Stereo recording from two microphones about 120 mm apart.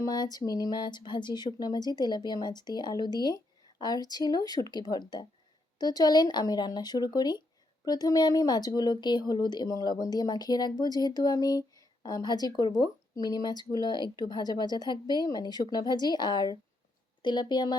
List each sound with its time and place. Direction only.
0.0 s speech: 35° left (ahead or behind)